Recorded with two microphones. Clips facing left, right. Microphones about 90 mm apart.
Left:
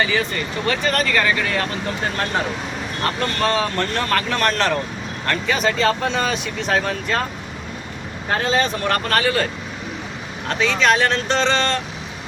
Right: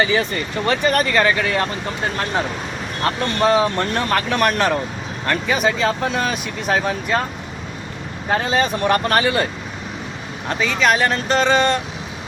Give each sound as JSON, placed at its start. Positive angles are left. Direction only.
{"t": 0.6, "sound": "speech", "side_deg": -25}
{"t": 3.4, "sound": "speech", "side_deg": -15}
{"t": 5.5, "sound": "speech", "side_deg": -5}
{"t": 8.3, "sound": "speech", "side_deg": -15}
{"t": 10.6, "sound": "speech", "side_deg": -5}